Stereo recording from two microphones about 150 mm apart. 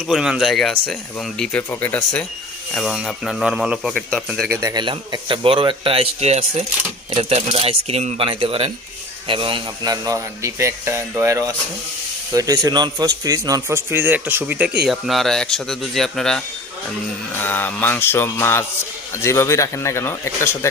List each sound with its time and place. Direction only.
0.1 s speech: 5° right (ahead or behind)
1.7 s music: 10° left (ahead or behind)
2.7 s speech: centre (ahead or behind)
4.4 s speech: 15° right (ahead or behind)
4.7 s a man's voice: 30° right (ahead or behind); by 16.4 s 5° left (ahead or behind)
17.3 s music: 15° left (ahead or behind)
19.1 s speech: 15° left (ahead or behind)